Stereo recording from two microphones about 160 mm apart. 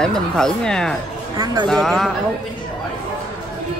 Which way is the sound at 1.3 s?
25° right (ahead or behind).